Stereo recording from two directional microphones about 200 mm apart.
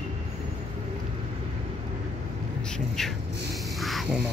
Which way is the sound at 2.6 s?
5° left (ahead or behind).